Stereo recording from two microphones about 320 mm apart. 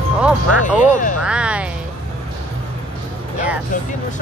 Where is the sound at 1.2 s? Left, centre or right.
Centre.